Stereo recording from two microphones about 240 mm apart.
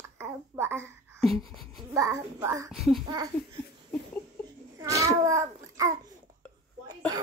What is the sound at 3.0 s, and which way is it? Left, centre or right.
Speech, centre.